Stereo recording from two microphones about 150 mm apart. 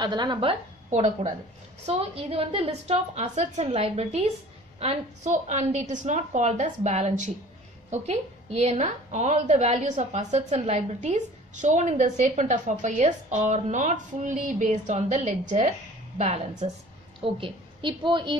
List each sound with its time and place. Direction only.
0.0 s a woman's voice: 30° right (ahead or behind)
0.8 s speech: 55° right (ahead or behind)
1.9 s a woman's voice: 40° right (ahead or behind)
17.2 s a woman's voice: 35° right (ahead or behind)